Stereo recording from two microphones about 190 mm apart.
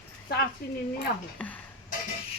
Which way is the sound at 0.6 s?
55° left (ahead or behind).